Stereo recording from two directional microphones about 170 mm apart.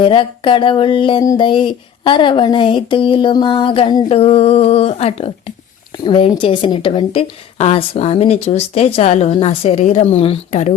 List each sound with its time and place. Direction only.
0.0 s a woman's voice: 30° left (ahead or behind)